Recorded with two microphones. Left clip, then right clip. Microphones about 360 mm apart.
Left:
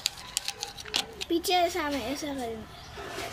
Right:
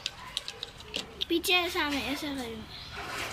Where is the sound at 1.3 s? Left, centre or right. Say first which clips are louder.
Left 1 dB; centre.